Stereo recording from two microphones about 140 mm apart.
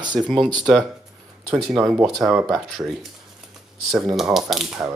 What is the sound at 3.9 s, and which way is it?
Speech, centre (ahead or behind).